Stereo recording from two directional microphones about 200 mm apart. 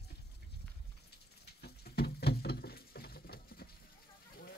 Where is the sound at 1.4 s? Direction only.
55° left (ahead or behind).